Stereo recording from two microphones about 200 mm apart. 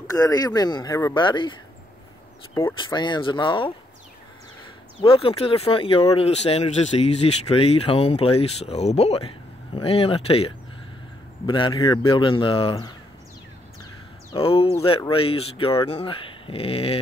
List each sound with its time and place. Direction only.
0.1 s speech: 20° left (ahead or behind)
2.5 s speech: 20° left (ahead or behind)
5.0 s speech: 30° left (ahead or behind)
14.4 s speech: 30° left (ahead or behind)